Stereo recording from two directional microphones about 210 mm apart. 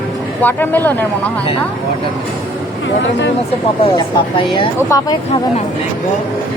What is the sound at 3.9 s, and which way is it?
Speech, 20° left (ahead or behind).